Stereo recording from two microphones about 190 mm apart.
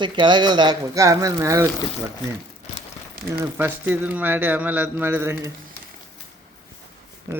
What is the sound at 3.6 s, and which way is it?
Speech, 10° right (ahead or behind).